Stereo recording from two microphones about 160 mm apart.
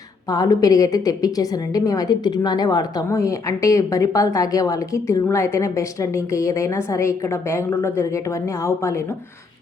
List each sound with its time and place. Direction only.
0.3 s a woman's voice: 20° left (ahead or behind)